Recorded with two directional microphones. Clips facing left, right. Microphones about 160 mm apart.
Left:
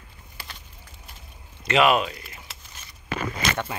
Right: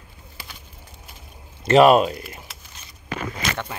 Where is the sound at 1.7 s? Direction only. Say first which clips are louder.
Right 7 dB; 40° right (ahead or behind).